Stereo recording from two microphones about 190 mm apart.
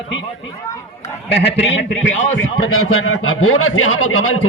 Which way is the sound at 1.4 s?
60° left (ahead or behind).